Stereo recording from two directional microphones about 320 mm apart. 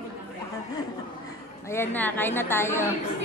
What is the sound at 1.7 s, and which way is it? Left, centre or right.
A woman's voice, centre.